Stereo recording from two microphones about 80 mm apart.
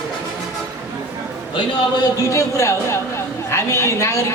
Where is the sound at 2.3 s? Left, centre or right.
Left.